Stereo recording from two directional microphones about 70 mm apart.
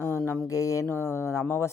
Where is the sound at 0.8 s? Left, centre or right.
Left.